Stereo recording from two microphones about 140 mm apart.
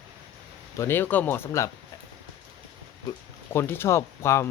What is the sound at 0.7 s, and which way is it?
Speech, 15° left (ahead or behind).